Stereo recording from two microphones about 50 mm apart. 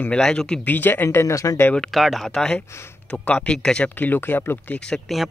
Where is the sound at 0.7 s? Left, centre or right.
Left.